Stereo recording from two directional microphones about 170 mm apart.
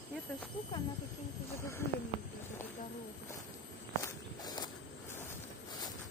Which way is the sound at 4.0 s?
25° left (ahead or behind).